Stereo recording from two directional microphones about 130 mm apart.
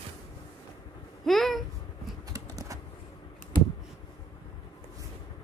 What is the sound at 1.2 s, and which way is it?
Speech, centre (ahead or behind).